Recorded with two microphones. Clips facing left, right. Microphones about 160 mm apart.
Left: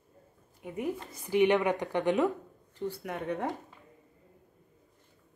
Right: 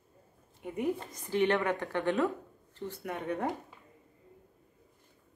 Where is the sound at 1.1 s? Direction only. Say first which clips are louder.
Left 5 dB; 10° left (ahead or behind).